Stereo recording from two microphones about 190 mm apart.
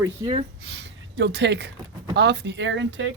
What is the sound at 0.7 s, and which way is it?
Speech, 65° right (ahead or behind).